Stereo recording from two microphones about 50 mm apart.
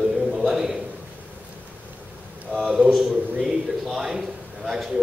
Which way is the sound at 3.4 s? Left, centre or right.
Centre.